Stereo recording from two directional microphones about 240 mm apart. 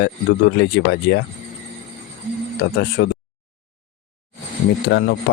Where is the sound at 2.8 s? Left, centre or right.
Left.